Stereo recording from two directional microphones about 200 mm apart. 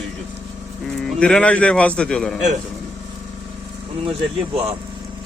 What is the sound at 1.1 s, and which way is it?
A man's voice, 5° left (ahead or behind).